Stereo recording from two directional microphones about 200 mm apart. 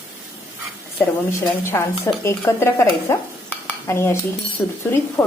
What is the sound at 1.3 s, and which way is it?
Speech, 10° left (ahead or behind).